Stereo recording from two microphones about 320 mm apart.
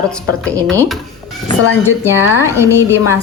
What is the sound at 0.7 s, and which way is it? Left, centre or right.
Speech, centre.